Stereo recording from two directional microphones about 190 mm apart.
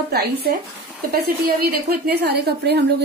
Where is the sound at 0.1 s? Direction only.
55° right (ahead or behind).